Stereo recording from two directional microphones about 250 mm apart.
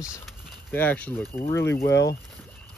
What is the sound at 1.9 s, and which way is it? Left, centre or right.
Speech, left.